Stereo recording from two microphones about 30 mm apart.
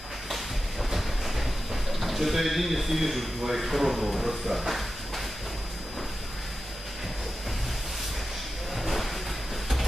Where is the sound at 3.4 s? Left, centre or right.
Centre.